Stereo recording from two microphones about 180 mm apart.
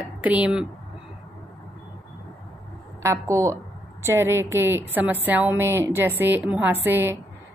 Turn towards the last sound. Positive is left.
turn(degrees=-10)  # may be behind; listen again after turning